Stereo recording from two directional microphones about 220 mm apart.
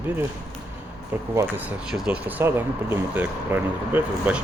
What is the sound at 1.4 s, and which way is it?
Speech, 10° right (ahead or behind).